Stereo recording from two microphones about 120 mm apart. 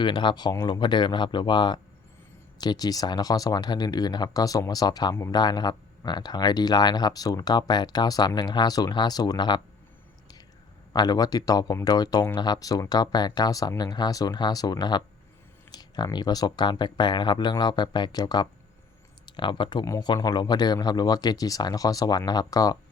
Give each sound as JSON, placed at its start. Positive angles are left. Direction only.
{"t": 0.0, "sound": "speech", "side_deg": 40}
{"t": 10.9, "sound": "speech", "side_deg": 35}
{"t": 19.8, "sound": "speech", "side_deg": 30}